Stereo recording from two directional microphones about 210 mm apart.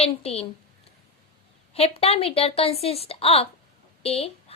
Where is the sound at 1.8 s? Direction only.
30° left (ahead or behind).